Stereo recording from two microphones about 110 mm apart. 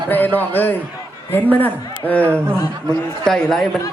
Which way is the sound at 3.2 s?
5° left (ahead or behind).